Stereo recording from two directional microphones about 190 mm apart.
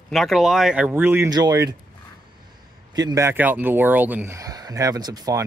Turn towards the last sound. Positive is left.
turn(degrees=-20)  # may be behind; listen again after turning